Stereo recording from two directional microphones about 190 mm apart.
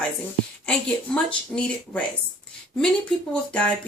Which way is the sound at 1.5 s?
5° left (ahead or behind).